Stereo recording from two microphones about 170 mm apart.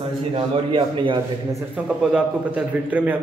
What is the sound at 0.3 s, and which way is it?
Speech, 30° right (ahead or behind).